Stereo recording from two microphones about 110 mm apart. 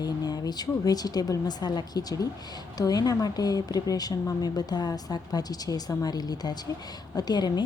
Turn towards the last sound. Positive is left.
turn(degrees=40)  # may be behind; listen again after turning